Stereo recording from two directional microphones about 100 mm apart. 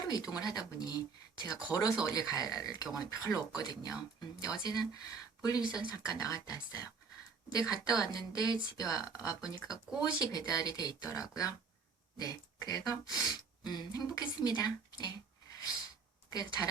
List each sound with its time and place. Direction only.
0.0 s speech: 40° left (ahead or behind)